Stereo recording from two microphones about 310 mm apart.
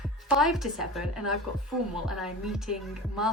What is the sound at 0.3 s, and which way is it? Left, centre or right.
A woman's voice, centre.